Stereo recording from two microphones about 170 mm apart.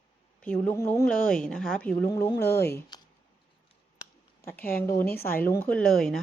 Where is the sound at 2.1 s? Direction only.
20° left (ahead or behind).